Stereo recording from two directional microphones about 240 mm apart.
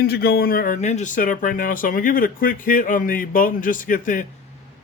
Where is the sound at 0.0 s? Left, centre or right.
Left.